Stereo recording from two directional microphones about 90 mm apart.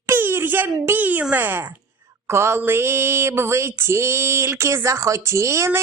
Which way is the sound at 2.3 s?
30° right (ahead or behind).